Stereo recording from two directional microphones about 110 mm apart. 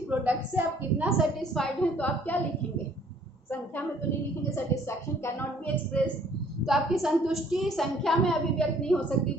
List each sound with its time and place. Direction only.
0.1 s a woman's voice: 15° right (ahead or behind)
1.0 s a woman's voice: 5° left (ahead or behind)
4.7 s a woman's voice: 20° left (ahead or behind)
6.7 s a woman's voice: centre (ahead or behind)